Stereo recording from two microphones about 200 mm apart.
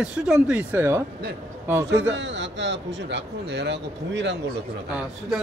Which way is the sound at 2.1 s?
65° right (ahead or behind).